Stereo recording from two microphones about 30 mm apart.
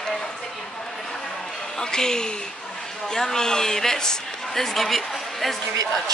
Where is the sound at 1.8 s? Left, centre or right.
Left; by 5.5 s centre.